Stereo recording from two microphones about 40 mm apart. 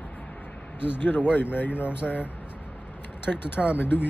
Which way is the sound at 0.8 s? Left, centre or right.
Left.